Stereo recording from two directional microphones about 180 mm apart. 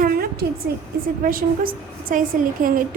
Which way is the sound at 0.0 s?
55° right (ahead or behind).